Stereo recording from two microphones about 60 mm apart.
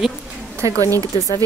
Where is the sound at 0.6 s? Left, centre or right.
Right.